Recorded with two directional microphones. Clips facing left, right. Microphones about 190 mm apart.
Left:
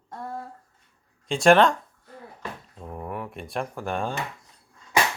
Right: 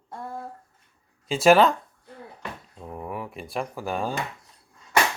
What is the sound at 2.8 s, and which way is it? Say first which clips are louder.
Speech: even; centre (ahead or behind).